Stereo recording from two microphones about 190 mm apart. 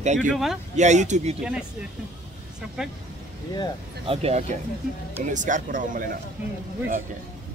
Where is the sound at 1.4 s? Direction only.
5° right (ahead or behind).